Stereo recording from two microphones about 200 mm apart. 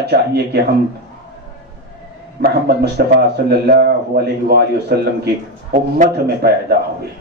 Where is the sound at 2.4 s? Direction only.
50° right (ahead or behind).